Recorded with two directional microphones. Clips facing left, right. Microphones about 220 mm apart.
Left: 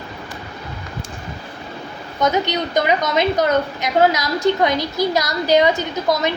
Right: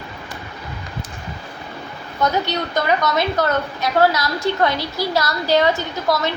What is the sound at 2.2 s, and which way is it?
A woman's voice, 20° left (ahead or behind).